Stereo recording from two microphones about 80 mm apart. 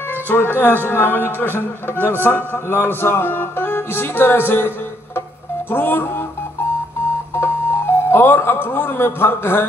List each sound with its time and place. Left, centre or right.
0.3 s a man's voice: left
7.3 s speech: left